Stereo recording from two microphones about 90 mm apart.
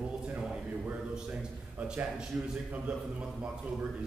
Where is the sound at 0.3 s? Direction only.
15° right (ahead or behind).